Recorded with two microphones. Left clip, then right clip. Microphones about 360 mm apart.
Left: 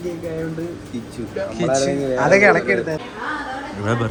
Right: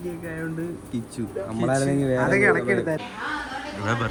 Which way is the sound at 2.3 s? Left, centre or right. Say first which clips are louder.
Left 8 dB; centre.